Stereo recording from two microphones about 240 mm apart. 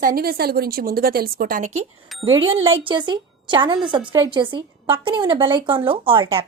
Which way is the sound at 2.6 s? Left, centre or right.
Right.